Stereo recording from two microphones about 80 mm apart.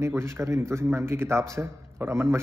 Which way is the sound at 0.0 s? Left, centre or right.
Right.